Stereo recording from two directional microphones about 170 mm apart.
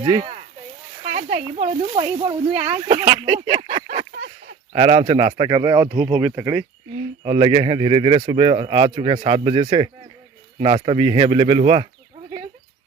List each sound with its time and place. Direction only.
0.0 s speech: 30° right (ahead or behind); by 6.7 s 15° right (ahead or behind)
7.3 s speech: 30° right (ahead or behind)